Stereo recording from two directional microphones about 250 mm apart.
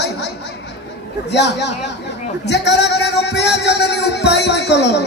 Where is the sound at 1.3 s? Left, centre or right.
Left.